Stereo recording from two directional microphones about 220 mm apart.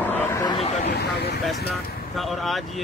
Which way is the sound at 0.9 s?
50° left (ahead or behind).